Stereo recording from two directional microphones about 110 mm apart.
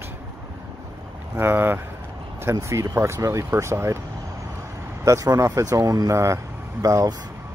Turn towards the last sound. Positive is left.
turn(degrees=-30)  # may be behind; listen again after turning